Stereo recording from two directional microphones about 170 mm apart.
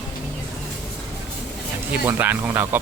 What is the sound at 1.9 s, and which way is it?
Speech, 10° right (ahead or behind).